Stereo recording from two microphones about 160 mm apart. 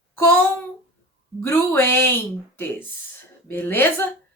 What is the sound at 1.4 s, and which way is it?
Speech, 15° left (ahead or behind).